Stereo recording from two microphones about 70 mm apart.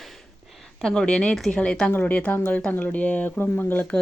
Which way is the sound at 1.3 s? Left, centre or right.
Centre.